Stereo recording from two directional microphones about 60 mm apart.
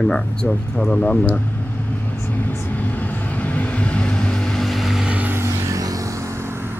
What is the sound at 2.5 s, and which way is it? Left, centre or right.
Vehicle, left.